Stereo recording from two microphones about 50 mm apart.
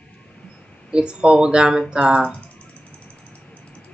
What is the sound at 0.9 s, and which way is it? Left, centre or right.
Speech, centre.